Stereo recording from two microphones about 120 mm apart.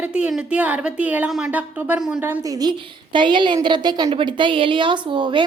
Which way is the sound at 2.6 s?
40° right (ahead or behind).